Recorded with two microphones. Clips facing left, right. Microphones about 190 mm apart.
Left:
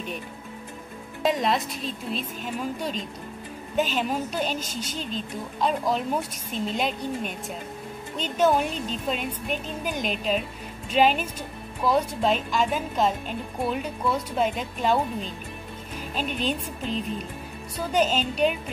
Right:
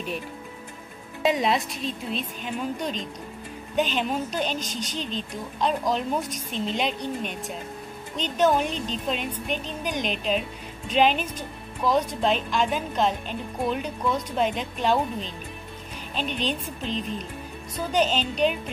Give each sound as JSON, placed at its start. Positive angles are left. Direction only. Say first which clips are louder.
{"t": 1.2, "sound": "a woman's voice", "louder": "right 1 dB", "side_deg": 0}
{"t": 16.2, "sound": "speech", "louder": "even", "side_deg": 5}